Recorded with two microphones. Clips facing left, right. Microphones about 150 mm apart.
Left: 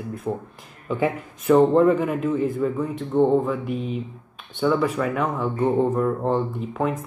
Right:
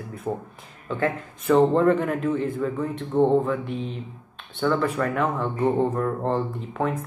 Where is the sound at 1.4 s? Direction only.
Centre (ahead or behind).